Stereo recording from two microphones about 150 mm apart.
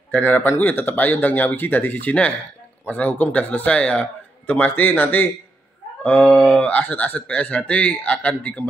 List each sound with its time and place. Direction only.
0.1 s speech: 15° left (ahead or behind)